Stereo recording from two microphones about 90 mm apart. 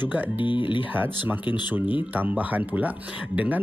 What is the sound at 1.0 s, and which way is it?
Speech, 20° right (ahead or behind).